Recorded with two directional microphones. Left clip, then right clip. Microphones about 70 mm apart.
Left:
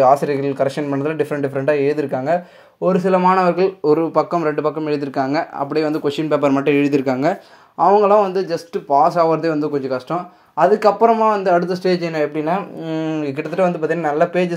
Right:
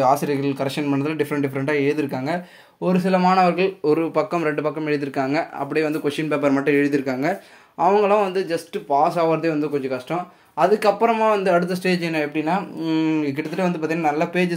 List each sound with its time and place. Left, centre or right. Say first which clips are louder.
0.0 s speech: left 5 dB; left
1.1 s speech: left 3 dB; left
3.1 s speech: left 2 dB; centre
3.4 s speech: left 3 dB; left
4.6 s speech: left 3 dB; left
7.8 s speech: left 5 dB; left
8.7 s speech: left 5 dB; left
10.6 s speech: left 4 dB; left
11.1 s speech: left 3 dB; left
12.4 s speech: left 2 dB; left